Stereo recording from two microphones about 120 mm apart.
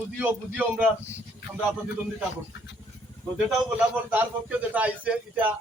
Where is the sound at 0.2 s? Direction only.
15° right (ahead or behind).